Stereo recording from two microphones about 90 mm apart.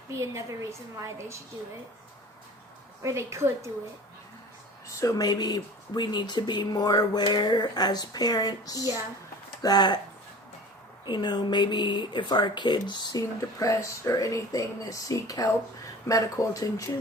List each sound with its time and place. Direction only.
0.1 s a woman's voice: 35° right (ahead or behind)
3.0 s a woman's voice: 30° right (ahead or behind)
4.9 s speech: 40° left (ahead or behind)
11.0 s speech: 55° left (ahead or behind)
13.6 s speech: 35° left (ahead or behind)